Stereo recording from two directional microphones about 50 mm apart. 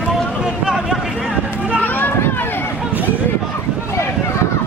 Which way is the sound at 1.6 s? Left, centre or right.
Right.